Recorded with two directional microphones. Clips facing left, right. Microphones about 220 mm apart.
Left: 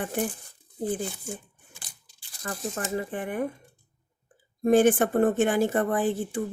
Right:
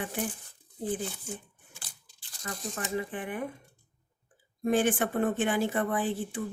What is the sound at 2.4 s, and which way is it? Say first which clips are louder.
Speech: left 4 dB; 45° left (ahead or behind).